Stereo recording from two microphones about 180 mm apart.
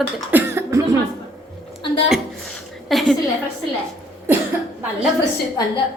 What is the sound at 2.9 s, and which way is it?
Speech, centre (ahead or behind).